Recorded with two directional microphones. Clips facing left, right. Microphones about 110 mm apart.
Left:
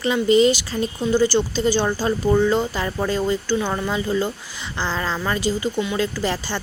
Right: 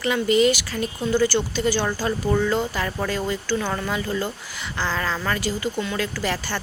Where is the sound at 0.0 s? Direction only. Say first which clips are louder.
Left 3 dB; 25° left (ahead or behind).